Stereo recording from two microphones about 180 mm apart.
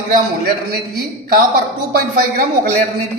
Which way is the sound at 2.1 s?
55° right (ahead or behind).